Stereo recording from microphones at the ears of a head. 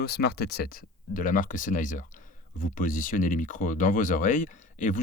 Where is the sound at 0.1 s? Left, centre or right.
Left.